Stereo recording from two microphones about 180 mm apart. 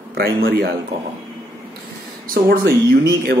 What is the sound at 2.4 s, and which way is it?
Speech, 65° right (ahead or behind).